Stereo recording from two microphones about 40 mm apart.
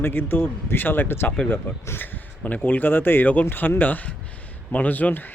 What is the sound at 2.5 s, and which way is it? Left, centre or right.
Speech, left.